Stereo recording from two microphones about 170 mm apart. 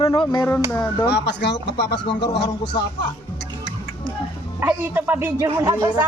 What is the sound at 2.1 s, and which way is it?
Speech, 25° left (ahead or behind).